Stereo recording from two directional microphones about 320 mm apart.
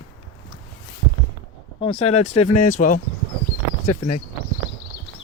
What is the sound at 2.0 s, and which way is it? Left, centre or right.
Speech, left.